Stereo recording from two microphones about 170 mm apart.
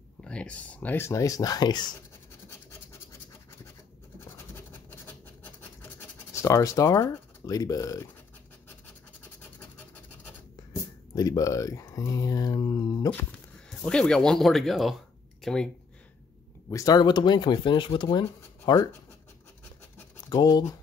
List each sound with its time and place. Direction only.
0.2 s speech: 5° left (ahead or behind); by 2.0 s 25° left (ahead or behind)
4.2 s scratch: 10° left (ahead or behind)
6.3 s speech: 20° left (ahead or behind)
10.2 s speech: 20° left (ahead or behind)
13.1 s speech: 5° left (ahead or behind)
16.6 s speech: 20° left (ahead or behind)
20.2 s speech: 20° left (ahead or behind)